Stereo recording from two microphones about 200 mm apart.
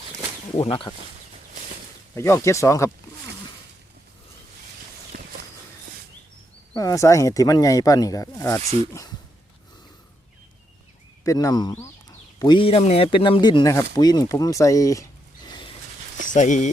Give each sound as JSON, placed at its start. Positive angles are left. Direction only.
{"t": 0.5, "sound": "speech", "side_deg": 30}
{"t": 2.1, "sound": "speech", "side_deg": 15}
{"t": 5.1, "sound": "walk", "side_deg": -45}
{"t": 6.7, "sound": "speech", "side_deg": 15}
{"t": 8.6, "sound": "speech", "side_deg": -30}
{"t": 11.2, "sound": "speech", "side_deg": 15}
{"t": 16.3, "sound": "speech", "side_deg": 40}